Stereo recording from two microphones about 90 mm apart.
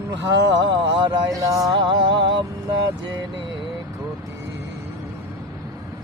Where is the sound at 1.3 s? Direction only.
40° right (ahead or behind).